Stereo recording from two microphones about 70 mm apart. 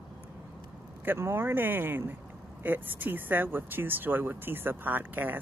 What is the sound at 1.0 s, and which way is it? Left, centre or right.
Speech, right.